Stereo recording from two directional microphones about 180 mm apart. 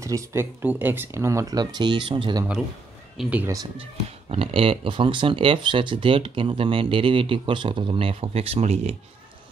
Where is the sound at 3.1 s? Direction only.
10° right (ahead or behind).